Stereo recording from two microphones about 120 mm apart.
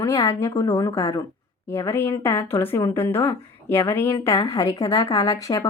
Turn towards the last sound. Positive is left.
turn(degrees=30)  # may be behind; listen again after turning